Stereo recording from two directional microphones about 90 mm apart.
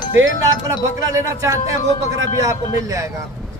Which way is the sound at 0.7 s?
40° right (ahead or behind).